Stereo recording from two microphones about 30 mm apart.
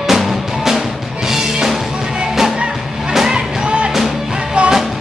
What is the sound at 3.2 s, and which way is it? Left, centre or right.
Music, right.